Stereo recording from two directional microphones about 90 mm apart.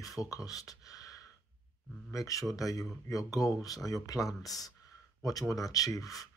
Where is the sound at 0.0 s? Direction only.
40° left (ahead or behind).